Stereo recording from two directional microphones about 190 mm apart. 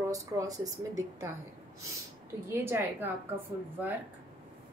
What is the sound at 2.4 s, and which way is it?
Speech, 10° right (ahead or behind).